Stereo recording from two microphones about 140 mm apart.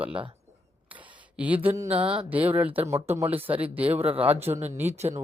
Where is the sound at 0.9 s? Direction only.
10° right (ahead or behind).